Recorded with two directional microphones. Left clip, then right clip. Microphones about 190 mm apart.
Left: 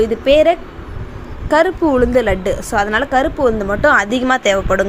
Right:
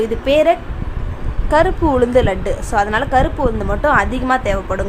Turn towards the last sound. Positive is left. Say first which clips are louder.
# left 4 dB
turn(degrees=15)  # may be behind; listen again after turning